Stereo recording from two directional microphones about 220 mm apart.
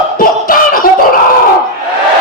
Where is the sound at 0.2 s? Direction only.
40° left (ahead or behind).